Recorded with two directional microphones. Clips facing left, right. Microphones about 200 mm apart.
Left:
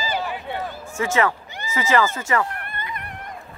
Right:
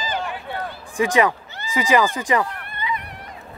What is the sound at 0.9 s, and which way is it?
Speech, 15° right (ahead or behind).